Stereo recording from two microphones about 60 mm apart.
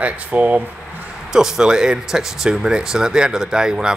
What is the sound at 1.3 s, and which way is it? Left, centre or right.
Speech, centre.